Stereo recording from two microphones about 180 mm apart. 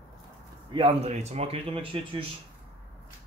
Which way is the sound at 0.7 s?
35° right (ahead or behind).